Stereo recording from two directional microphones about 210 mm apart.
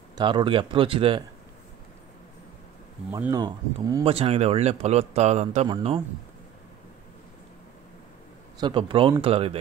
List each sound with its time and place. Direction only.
0.2 s speech: 20° right (ahead or behind)
3.1 s a man's voice: 15° right (ahead or behind)
8.5 s speech: 20° right (ahead or behind)